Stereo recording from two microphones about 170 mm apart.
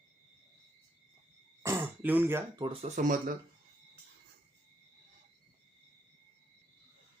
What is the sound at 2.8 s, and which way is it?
Speech, 45° right (ahead or behind).